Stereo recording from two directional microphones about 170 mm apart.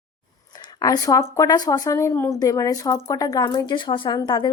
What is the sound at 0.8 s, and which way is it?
Speech, 20° left (ahead or behind).